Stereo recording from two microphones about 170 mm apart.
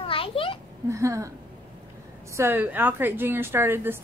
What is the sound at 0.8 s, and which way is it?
Speech, 15° right (ahead or behind).